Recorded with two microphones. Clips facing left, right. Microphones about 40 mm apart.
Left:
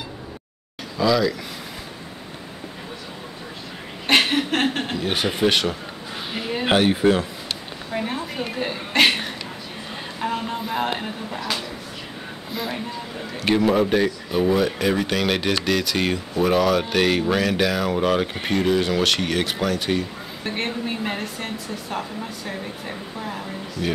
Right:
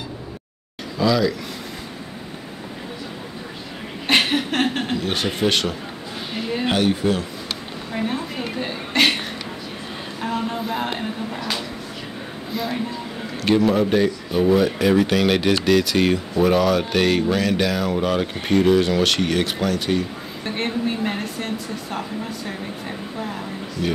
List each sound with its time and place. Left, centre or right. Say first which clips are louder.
0.9 s speech: even; centre
4.1 s a sound: even; centre
6.6 s speech: left 3 dB; left
7.9 s a woman's voice: right 1 dB; centre